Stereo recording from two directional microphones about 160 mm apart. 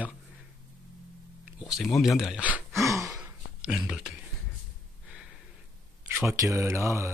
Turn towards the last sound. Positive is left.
turn(degrees=-15)  # may be behind; listen again after turning